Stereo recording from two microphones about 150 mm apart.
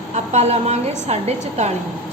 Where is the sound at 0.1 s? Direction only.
50° right (ahead or behind).